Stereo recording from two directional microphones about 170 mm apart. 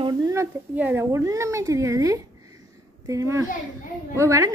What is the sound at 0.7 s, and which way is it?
A woman's voice, 15° right (ahead or behind).